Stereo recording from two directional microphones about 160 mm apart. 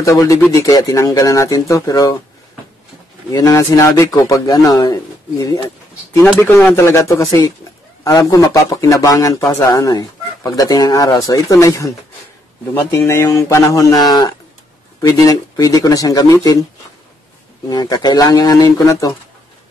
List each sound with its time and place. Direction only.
0.0 s speech: 20° left (ahead or behind)
3.3 s speech: 20° left (ahead or behind)
12.9 s speech: 15° left (ahead or behind)
17.6 s speech: 25° left (ahead or behind)